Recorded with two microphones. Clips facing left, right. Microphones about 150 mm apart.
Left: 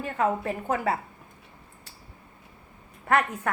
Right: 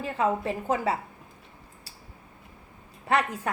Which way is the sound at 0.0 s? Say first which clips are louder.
Even; 20° right (ahead or behind).